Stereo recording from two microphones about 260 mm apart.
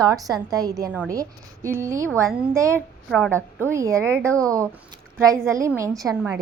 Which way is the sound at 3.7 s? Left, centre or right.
Centre.